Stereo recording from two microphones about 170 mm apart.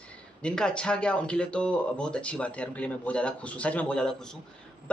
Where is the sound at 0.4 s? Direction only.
5° left (ahead or behind).